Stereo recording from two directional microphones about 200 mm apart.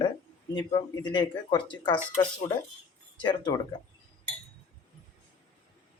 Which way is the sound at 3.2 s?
25° left (ahead or behind).